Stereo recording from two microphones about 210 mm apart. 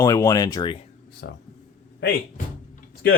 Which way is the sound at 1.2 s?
55° left (ahead or behind).